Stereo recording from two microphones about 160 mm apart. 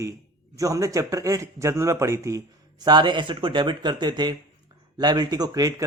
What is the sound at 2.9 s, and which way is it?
Speech, 30° right (ahead or behind).